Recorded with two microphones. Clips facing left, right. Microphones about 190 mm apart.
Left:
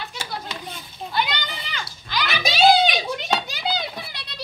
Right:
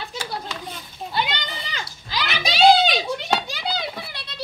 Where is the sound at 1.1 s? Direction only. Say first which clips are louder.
Even; 30° right (ahead or behind).